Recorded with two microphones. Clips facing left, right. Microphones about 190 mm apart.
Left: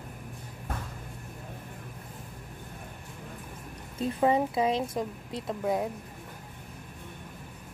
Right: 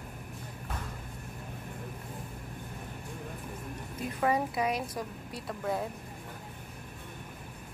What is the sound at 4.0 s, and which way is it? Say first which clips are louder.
A woman's voice: left 5 dB; 25° left (ahead or behind).